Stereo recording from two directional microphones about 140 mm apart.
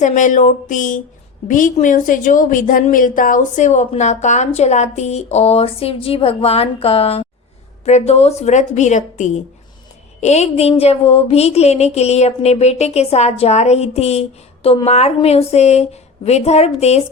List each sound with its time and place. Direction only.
0.0 s a woman's voice: 60° left (ahead or behind)